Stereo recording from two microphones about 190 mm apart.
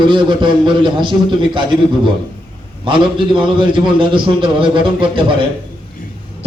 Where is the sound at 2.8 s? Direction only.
25° right (ahead or behind).